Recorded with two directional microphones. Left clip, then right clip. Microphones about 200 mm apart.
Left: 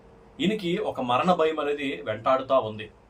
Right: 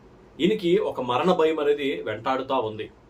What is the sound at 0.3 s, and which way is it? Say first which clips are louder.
Speech: right 6 dB; 5° right (ahead or behind).